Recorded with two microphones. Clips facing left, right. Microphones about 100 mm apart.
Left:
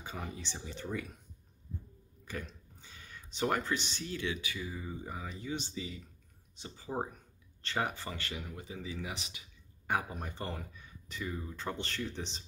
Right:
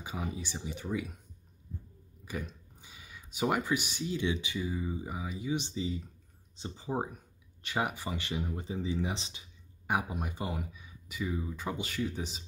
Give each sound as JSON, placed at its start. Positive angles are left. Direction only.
{"t": 0.0, "sound": "speech", "side_deg": -10}
{"t": 2.2, "sound": "speech", "side_deg": -15}
{"t": 5.8, "sound": "speech", "side_deg": -25}
{"t": 6.9, "sound": "speech", "side_deg": -10}
{"t": 9.8, "sound": "speech", "side_deg": -15}